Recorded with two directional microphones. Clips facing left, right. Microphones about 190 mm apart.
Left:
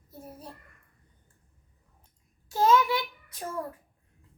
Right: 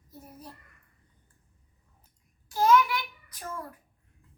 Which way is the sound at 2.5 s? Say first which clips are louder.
Even; 25° left (ahead or behind).